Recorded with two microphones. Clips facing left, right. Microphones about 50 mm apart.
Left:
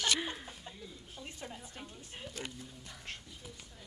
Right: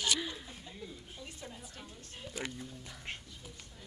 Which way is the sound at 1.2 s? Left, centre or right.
Left.